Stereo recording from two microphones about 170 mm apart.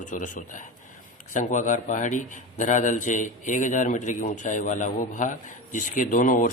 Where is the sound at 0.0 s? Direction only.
50° left (ahead or behind).